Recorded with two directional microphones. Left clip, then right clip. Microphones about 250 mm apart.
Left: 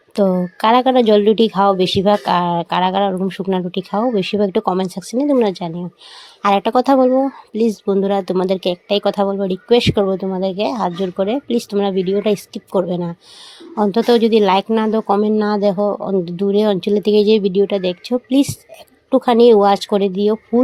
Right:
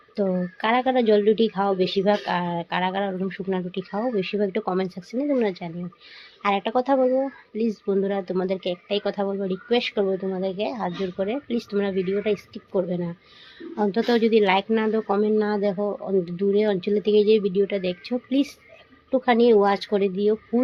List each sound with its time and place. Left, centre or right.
0.2 s speech: left